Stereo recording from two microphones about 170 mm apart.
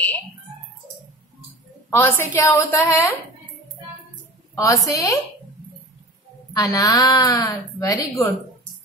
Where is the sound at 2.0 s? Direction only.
15° left (ahead or behind).